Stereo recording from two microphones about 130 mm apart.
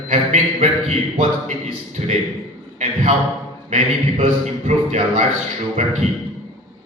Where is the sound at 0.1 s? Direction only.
65° right (ahead or behind).